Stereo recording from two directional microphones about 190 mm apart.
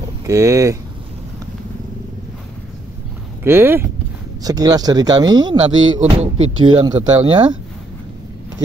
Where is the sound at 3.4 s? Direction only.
10° right (ahead or behind).